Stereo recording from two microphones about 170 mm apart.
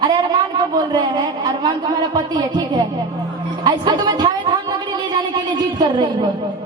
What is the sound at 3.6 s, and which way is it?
Music, 25° right (ahead or behind).